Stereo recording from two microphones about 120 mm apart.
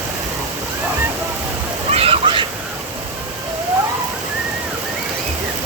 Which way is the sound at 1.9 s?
55° right (ahead or behind).